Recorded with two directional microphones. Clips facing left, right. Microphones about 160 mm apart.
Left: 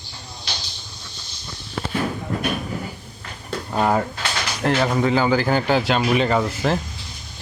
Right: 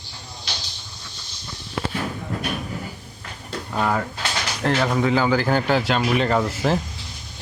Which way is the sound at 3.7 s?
30° left (ahead or behind).